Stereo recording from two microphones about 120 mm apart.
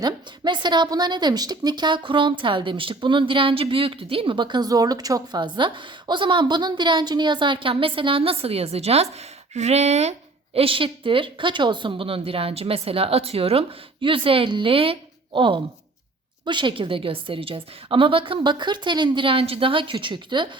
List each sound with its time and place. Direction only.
0.0 s a woman's voice: 40° right (ahead or behind)